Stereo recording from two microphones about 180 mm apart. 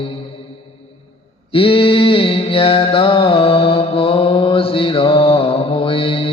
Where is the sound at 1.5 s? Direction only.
30° left (ahead or behind).